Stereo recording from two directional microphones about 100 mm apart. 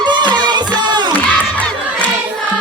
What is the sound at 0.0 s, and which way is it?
Music, 45° right (ahead or behind).